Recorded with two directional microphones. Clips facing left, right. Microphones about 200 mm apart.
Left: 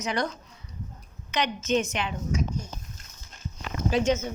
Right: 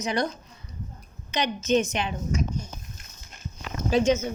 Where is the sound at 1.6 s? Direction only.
15° right (ahead or behind).